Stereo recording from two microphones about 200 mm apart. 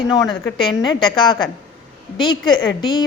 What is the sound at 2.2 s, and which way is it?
Speech, 20° left (ahead or behind).